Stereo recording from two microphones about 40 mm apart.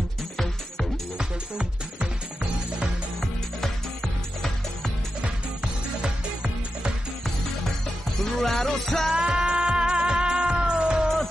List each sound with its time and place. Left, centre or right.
3.2 s music: centre
6.0 s music: right
8.2 s music: centre
9.1 s music: centre